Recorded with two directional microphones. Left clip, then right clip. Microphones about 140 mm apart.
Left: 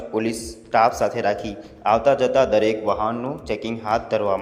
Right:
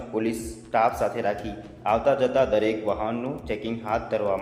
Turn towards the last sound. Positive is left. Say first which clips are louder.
# left 4 dB
turn(degrees=30)  # may be behind; listen again after turning